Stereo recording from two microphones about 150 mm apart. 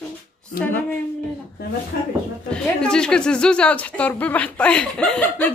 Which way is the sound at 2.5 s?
5° left (ahead or behind).